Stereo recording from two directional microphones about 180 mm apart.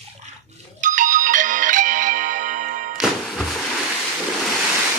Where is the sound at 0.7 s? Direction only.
45° right (ahead or behind).